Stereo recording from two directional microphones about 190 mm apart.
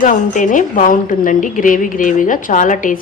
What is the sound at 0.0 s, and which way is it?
A woman's voice, 45° left (ahead or behind).